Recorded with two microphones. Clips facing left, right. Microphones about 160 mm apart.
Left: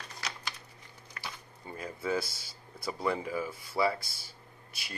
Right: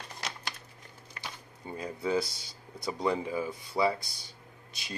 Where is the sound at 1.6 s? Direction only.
25° right (ahead or behind).